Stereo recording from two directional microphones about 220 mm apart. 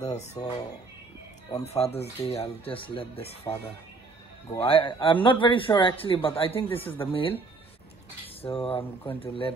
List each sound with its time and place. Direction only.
0.0 s speech: 30° left (ahead or behind)
1.6 s speech: 30° left (ahead or behind)
4.6 s speech: 25° left (ahead or behind)
8.4 s speech: 25° left (ahead or behind)